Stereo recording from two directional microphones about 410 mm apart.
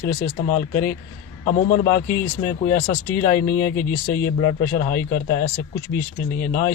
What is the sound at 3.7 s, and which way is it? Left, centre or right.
Speech, left.